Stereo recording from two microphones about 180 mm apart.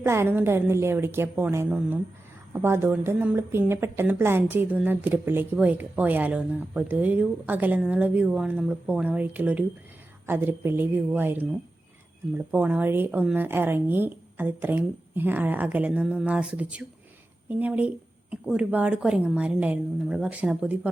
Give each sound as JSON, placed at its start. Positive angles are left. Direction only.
{"t": 0.0, "sound": "a woman's voice", "side_deg": -15}